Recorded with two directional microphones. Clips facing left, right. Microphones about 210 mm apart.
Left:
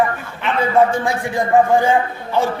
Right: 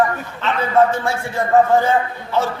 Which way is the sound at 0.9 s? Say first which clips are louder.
Left 2 dB; 15° left (ahead or behind).